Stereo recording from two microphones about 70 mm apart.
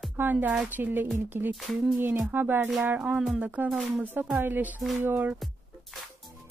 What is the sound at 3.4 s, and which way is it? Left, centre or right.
Speech, right.